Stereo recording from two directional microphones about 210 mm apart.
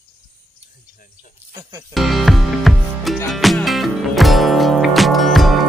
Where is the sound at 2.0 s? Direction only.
Centre (ahead or behind).